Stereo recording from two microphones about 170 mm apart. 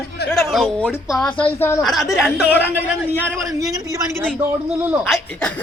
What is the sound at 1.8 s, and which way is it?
Speech, centre (ahead or behind).